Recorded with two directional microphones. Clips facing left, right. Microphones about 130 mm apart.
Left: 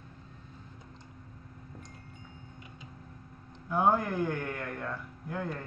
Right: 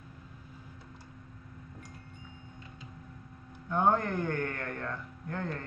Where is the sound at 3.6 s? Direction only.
5° left (ahead or behind).